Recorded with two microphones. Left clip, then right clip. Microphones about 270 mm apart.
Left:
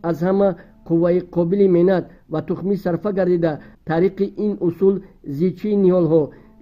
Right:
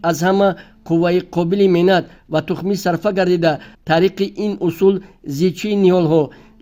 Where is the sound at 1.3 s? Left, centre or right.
Right.